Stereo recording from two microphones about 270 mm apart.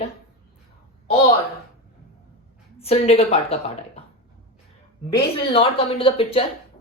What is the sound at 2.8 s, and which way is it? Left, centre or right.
Speech, left.